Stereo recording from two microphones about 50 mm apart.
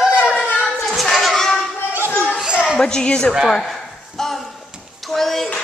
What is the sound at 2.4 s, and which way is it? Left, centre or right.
Children playing, centre.